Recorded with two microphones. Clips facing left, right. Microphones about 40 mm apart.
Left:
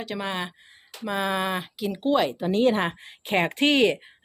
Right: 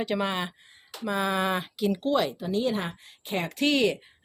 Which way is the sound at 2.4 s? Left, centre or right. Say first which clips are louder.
Left 6 dB; left.